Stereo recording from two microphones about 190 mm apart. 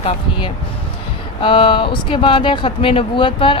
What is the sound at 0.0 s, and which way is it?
Speech, 25° left (ahead or behind).